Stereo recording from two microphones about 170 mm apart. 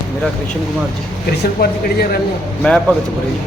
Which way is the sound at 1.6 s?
65° left (ahead or behind).